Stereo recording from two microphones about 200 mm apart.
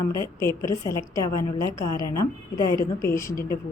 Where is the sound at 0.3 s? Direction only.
15° left (ahead or behind).